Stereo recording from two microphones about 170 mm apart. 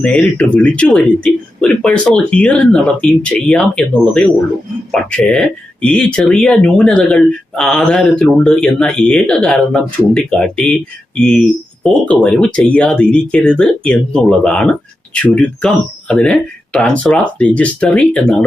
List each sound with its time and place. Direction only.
0.0 s speech: 5° left (ahead or behind)